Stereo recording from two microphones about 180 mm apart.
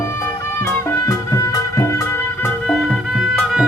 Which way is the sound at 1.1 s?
20° left (ahead or behind).